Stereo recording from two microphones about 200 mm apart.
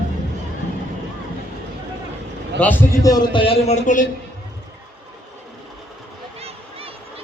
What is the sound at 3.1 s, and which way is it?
Speech, 25° left (ahead or behind).